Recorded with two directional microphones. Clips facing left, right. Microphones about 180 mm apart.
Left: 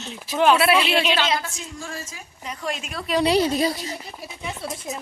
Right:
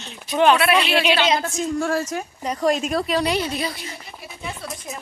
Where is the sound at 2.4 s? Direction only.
40° right (ahead or behind).